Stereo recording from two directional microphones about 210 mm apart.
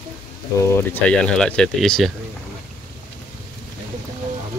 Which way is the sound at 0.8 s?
10° left (ahead or behind).